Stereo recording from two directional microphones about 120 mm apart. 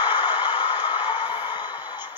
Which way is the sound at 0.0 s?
40° left (ahead or behind).